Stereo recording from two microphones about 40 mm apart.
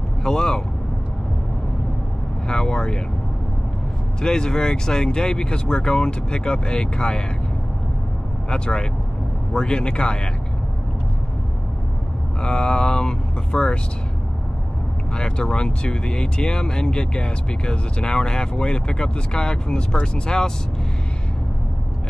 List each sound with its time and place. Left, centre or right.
0.2 s speech: centre
2.4 s speech: centre
4.2 s speech: centre
8.5 s speech: left
12.4 s speech: left
15.1 s speech: left